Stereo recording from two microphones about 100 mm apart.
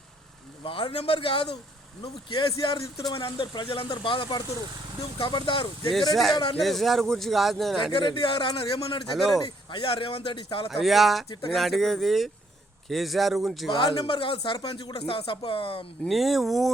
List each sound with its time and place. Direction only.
0.6 s speech: 65° left (ahead or behind)
2.0 s speech: 50° left (ahead or behind)
3.2 s speech: 60° left (ahead or behind)
5.9 s a man's voice: centre (ahead or behind)
7.9 s speech: 60° left (ahead or behind)
10.7 s a man's voice: centre (ahead or behind)
13.7 s speech: 55° left (ahead or behind)
14.8 s speech: 65° left (ahead or behind)
16.0 s a man's voice: centre (ahead or behind)